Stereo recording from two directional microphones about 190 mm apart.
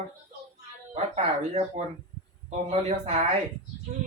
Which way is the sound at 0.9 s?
35° right (ahead or behind).